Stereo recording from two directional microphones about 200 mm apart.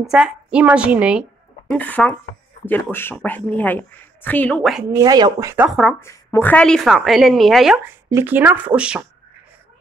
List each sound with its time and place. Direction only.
0.0 s a woman's voice: 5° right (ahead or behind)
1.7 s speech: 10° left (ahead or behind)
4.9 s speech: 20° right (ahead or behind)
5.9 s a woman's voice: 15° left (ahead or behind); by 9.0 s 5° right (ahead or behind)